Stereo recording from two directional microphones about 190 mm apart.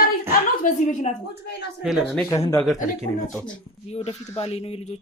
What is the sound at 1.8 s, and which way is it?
Speech, centre (ahead or behind).